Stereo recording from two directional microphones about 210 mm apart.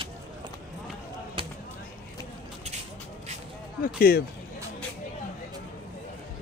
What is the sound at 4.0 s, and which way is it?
Speech, 45° left (ahead or behind).